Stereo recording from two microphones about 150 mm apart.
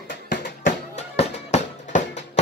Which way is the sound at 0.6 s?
50° left (ahead or behind).